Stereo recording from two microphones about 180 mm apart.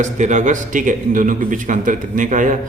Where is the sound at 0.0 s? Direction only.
40° right (ahead or behind).